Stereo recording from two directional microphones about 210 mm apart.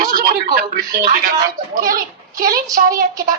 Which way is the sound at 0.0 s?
40° right (ahead or behind).